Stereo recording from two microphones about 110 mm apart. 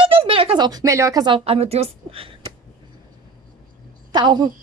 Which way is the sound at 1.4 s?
65° right (ahead or behind).